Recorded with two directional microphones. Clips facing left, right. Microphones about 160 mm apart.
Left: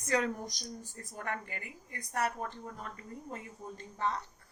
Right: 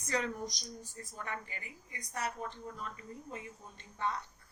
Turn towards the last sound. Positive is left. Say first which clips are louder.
# left 8 dB
turn(degrees=40)  # may be behind; listen again after turning